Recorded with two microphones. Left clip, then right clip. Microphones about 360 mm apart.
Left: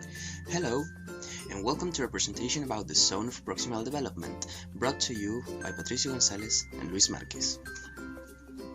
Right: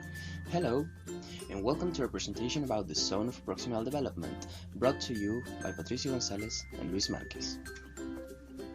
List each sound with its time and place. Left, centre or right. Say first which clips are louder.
0.5 s speech: even; left
5.1 s speech: left 1 dB; left
5.6 s speech: left 4 dB; left